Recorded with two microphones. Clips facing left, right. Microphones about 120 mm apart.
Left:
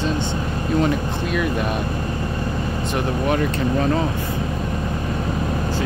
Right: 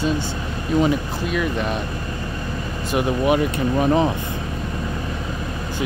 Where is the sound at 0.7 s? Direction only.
Centre (ahead or behind).